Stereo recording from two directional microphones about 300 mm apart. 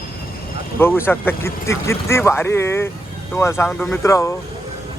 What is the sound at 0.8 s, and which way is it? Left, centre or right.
Speech, centre.